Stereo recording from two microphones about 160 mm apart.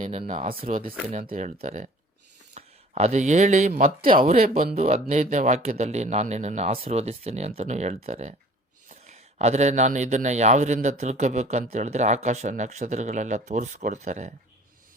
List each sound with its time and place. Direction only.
0.0 s a man's voice: 40° right (ahead or behind)
0.4 s speech: 65° right (ahead or behind)
1.1 s a man's voice: 50° right (ahead or behind)